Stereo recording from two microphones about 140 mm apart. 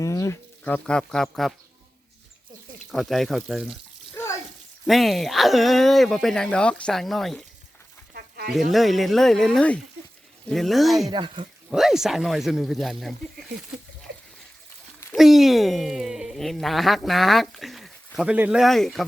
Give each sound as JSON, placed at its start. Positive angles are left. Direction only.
{"t": 0.0, "sound": "a sound", "side_deg": 20}
{"t": 0.6, "sound": "speech", "side_deg": 10}
{"t": 2.9, "sound": "speech", "side_deg": 0}
{"t": 4.1, "sound": "bathtub", "side_deg": 20}
{"t": 4.9, "sound": "speech", "side_deg": 0}
{"t": 8.7, "sound": "speech", "side_deg": 0}
{"t": 11.1, "sound": "speech", "side_deg": -35}
{"t": 11.7, "sound": "speech", "side_deg": -5}
{"t": 15.1, "sound": "speech", "side_deg": 0}